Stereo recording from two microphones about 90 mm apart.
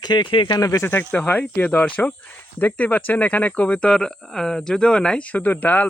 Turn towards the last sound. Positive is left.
turn(degrees=20)  # may be behind; listen again after turning